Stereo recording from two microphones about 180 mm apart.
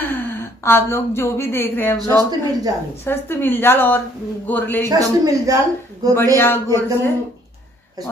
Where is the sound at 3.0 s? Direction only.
10° left (ahead or behind).